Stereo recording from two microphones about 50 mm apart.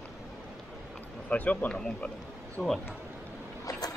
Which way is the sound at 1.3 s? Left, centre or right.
Left.